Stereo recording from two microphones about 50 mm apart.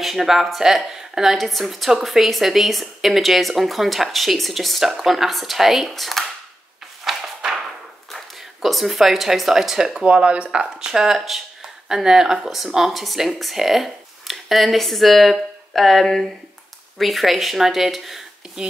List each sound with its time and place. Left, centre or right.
0.0 s a woman's voice: centre
7.1 s a sound: centre
8.1 s speech: centre
10.0 s a woman's voice: right; by 18.2 s centre
18.6 s speech: centre